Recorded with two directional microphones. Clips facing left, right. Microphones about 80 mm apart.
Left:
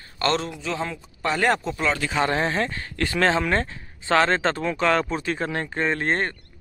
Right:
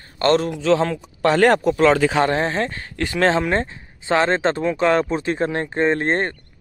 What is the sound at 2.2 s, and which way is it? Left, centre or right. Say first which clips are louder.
Speech: right 3 dB; right.